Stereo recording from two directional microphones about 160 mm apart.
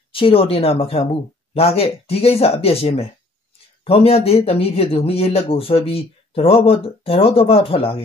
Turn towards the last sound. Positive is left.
turn(degrees=35)  # may be behind; listen again after turning